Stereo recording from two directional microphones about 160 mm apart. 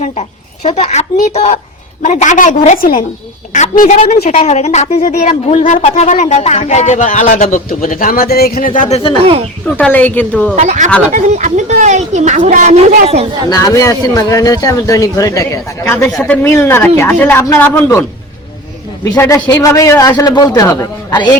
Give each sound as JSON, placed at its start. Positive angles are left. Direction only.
{"t": 0.0, "sound": "speech", "side_deg": 45}
{"t": 3.5, "sound": "speech", "side_deg": 45}
{"t": 7.9, "sound": "speech", "side_deg": 60}
{"t": 9.6, "sound": "speech", "side_deg": 10}
{"t": 10.5, "sound": "speech", "side_deg": -45}
{"t": 13.5, "sound": "a man's voice", "side_deg": 20}
{"t": 16.0, "sound": "speech", "side_deg": 10}
{"t": 19.0, "sound": "a man's voice", "side_deg": 20}